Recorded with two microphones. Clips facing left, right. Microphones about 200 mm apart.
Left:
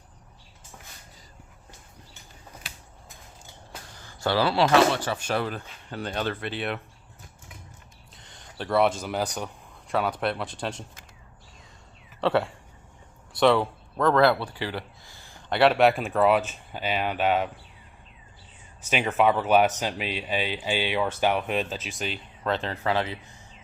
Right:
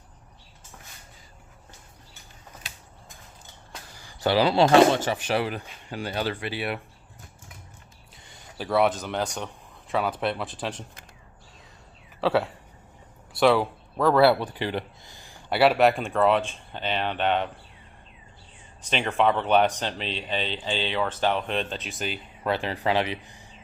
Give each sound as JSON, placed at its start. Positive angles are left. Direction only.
{"t": 3.9, "sound": "a sound", "side_deg": -15}
{"t": 4.7, "sound": "speech", "side_deg": -25}
{"t": 8.1, "sound": "speech", "side_deg": -5}
{"t": 12.2, "sound": "speech", "side_deg": 0}
{"t": 18.8, "sound": "speech", "side_deg": 5}